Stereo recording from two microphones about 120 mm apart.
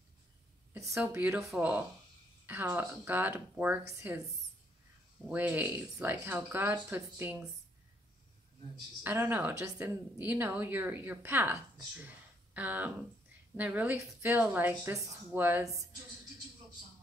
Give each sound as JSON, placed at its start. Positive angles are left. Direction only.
{"t": 0.7, "sound": "speech", "side_deg": -25}
{"t": 5.3, "sound": "speech", "side_deg": -15}
{"t": 9.0, "sound": "speech", "side_deg": -15}
{"t": 15.6, "sound": "speech", "side_deg": -25}